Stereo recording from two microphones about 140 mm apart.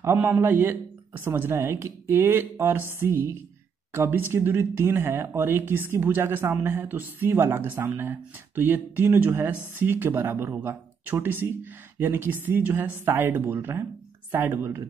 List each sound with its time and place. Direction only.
0.0 s speech: 15° right (ahead or behind)